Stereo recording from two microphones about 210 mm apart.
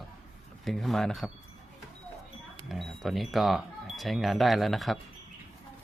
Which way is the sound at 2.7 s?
Centre (ahead or behind).